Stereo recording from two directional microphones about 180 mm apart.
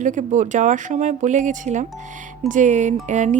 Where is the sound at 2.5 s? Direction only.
40° right (ahead or behind).